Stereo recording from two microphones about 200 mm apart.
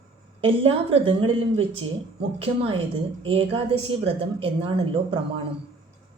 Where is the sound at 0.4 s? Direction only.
30° right (ahead or behind).